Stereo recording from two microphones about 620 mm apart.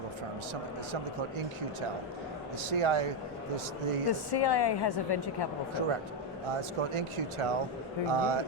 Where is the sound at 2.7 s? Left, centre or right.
Right.